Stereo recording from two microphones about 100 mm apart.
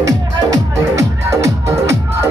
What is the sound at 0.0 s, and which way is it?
Music, 35° right (ahead or behind).